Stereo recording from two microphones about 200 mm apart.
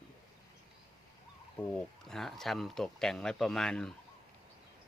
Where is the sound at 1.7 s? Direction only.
Centre (ahead or behind).